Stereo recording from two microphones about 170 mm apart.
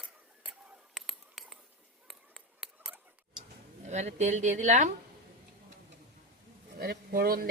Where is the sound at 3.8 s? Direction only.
40° right (ahead or behind).